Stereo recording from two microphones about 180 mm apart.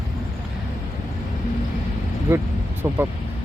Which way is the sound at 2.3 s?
10° right (ahead or behind).